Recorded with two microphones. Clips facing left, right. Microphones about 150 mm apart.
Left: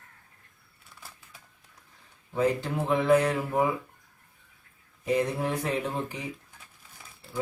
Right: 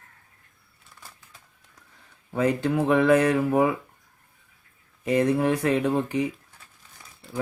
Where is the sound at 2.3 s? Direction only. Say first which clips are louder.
Right 4 dB; 70° right (ahead or behind).